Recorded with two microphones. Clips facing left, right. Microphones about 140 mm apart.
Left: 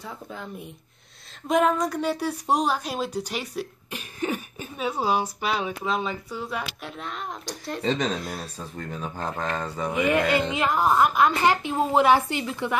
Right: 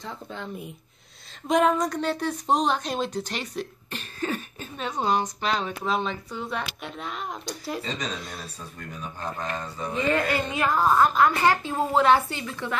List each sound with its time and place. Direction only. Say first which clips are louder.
0.0 s a woman's voice: right 1 dB; 5° left (ahead or behind)
7.8 s speech: left 7 dB; 55° left (ahead or behind)
9.5 s speech: left 3 dB; 85° left
9.9 s a woman's voice: left 2 dB; 15° left (ahead or behind)